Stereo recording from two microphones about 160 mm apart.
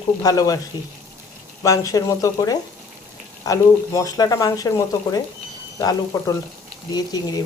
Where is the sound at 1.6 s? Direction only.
20° left (ahead or behind).